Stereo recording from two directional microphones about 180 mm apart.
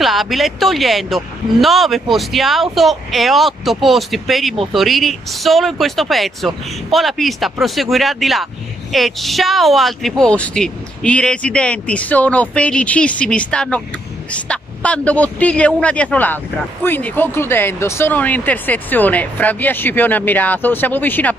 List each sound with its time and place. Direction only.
0.0 s speech: centre (ahead or behind)